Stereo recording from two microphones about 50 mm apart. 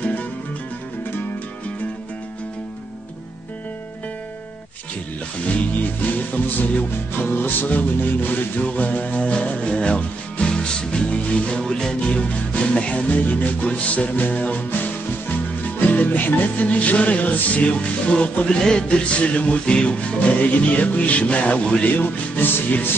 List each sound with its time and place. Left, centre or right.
0.0 s music: left
5.5 s music: left
6.9 s music: left
13.1 s music: left
15.9 s music: left
16.6 s music: left